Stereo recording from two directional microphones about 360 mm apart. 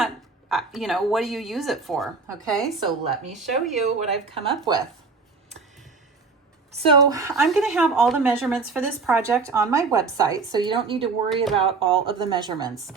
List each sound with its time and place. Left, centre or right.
0.0 s a woman's voice: centre
2.8 s a woman's voice: centre
3.3 s speech: centre
3.8 s a woman's voice: centre
6.7 s a woman's voice: centre